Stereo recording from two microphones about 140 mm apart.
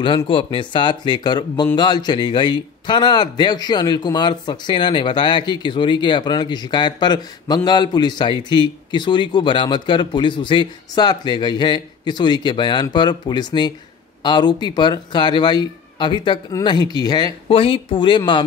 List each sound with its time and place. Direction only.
0.0 s speech: 35° left (ahead or behind)
17.5 s speech: 40° left (ahead or behind)